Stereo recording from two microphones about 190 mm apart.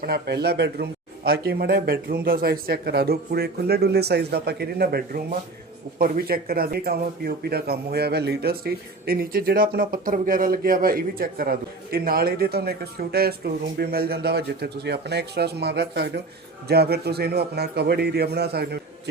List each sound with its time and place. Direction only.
0.0 s a man's voice: 55° right (ahead or behind)